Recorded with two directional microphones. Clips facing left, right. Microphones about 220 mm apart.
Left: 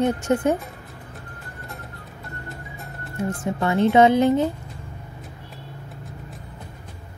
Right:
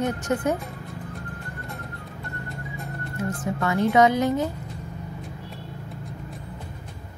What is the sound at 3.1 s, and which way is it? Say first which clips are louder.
A woman's voice: left 3 dB; 25° left (ahead or behind).